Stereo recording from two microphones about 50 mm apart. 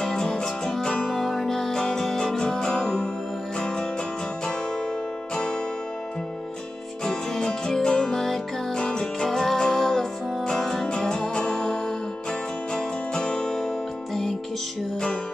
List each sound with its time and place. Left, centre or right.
0.0 s music: centre
5.3 s music: centre
7.1 s music: centre